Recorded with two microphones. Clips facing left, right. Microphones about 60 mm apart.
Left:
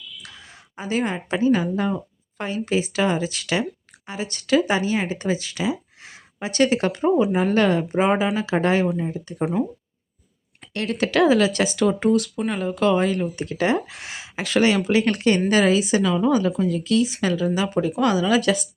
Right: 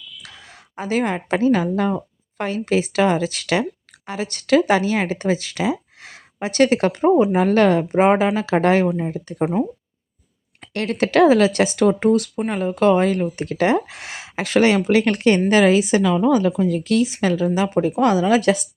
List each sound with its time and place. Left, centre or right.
0.3 s speech: right
9.4 s speech: right
10.6 s a woman's voice: right